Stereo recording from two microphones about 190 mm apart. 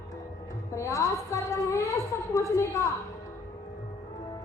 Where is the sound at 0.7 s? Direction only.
15° left (ahead or behind).